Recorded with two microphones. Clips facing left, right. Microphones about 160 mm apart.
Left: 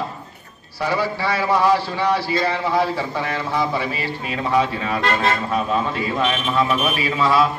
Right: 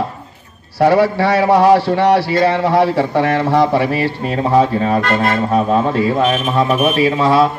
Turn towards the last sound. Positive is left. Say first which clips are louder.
# right 6 dB
turn(degrees=-45)  # may be behind; listen again after turning